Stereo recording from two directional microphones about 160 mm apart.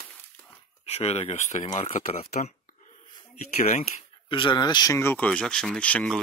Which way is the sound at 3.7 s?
35° left (ahead or behind).